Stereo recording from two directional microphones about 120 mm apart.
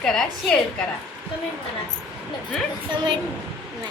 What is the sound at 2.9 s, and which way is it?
Speech, 40° right (ahead or behind).